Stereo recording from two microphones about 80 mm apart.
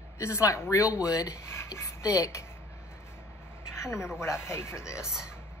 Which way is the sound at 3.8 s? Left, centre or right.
Left.